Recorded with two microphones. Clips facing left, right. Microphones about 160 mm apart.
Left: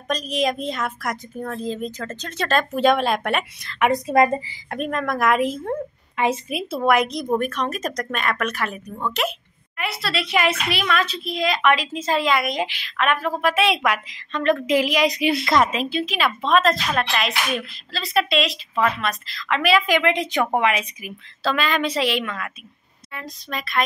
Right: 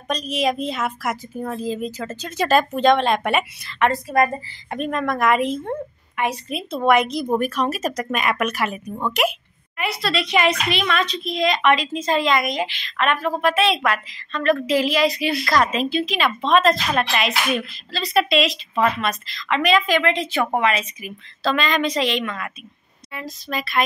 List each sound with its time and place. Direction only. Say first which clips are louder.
0.1 s a woman's voice: right 1 dB; centre (ahead or behind)
2.7 s a woman's voice: right 1 dB; 5° left (ahead or behind)
4.1 s a woman's voice: left 4 dB; 20° left (ahead or behind)
4.6 s a woman's voice: right 2 dB; centre (ahead or behind)
9.8 s a child's voice: right 3 dB; centre (ahead or behind); by 15.7 s 20° left (ahead or behind)
15.7 s a woman's voice: right 2 dB; 10° left (ahead or behind)